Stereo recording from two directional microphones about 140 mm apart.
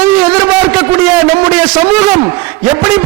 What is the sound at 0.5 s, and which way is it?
A man's voice, 10° right (ahead or behind).